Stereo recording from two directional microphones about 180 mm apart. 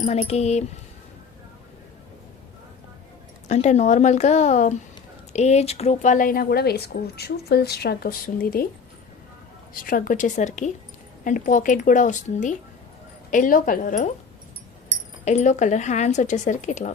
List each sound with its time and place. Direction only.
0.0 s speech: 35° left (ahead or behind)
3.5 s speech: 40° left (ahead or behind)
9.8 s speech: 50° left (ahead or behind)
15.2 s speech: 40° left (ahead or behind)